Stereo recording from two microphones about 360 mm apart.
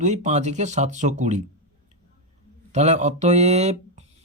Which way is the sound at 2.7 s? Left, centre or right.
Centre.